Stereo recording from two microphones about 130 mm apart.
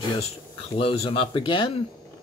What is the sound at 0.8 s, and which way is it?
Speech, 45° left (ahead or behind).